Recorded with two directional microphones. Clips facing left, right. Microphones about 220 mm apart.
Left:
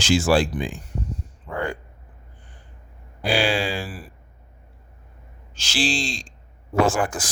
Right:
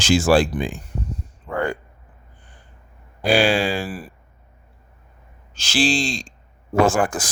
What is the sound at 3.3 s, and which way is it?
Speech, 50° right (ahead or behind).